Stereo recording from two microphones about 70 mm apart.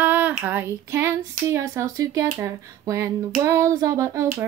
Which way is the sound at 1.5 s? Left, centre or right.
Right.